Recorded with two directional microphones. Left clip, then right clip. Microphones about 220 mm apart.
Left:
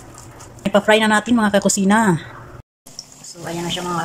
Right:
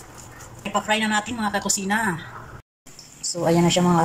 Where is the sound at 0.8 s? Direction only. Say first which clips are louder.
Left 8 dB; 35° left (ahead or behind).